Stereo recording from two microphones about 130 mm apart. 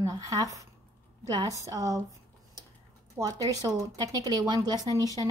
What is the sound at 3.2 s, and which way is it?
A woman's voice, 20° right (ahead or behind).